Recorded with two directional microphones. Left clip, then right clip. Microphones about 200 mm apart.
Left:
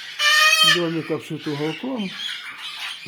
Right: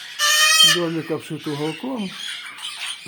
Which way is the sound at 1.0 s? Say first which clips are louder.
Even; 5° right (ahead or behind).